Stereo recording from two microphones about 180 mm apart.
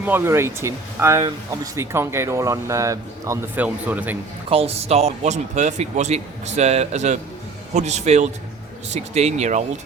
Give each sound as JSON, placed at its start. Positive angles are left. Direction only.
{"t": 0.0, "sound": "speech", "side_deg": -10}
{"t": 4.4, "sound": "speech", "side_deg": -35}